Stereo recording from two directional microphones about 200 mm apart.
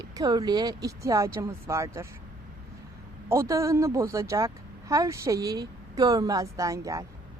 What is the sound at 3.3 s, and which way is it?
Speech, 15° right (ahead or behind).